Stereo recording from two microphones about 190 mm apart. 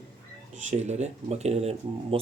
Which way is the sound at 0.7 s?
35° right (ahead or behind).